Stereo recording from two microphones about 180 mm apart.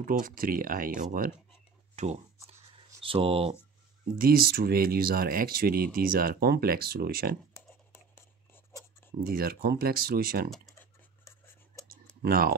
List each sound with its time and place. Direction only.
0.2 s speech: 55° right (ahead or behind)
2.0 s speech: 40° right (ahead or behind)
4.2 s speech: 55° right (ahead or behind)
8.1 s writing: 10° left (ahead or behind)
9.2 s speech: 55° right (ahead or behind)
10.6 s scratch: 15° left (ahead or behind)
12.2 s speech: 55° right (ahead or behind)